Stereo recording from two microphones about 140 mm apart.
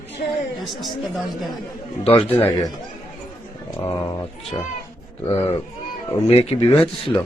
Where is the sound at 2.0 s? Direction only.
45° left (ahead or behind).